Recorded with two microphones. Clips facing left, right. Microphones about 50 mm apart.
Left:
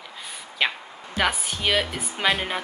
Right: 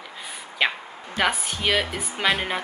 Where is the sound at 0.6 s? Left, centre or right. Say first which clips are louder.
Right 1 dB; centre.